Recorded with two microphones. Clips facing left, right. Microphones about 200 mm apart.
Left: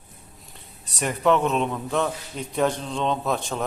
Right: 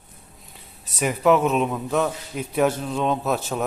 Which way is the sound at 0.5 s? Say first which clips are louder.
Right 2 dB; centre (ahead or behind).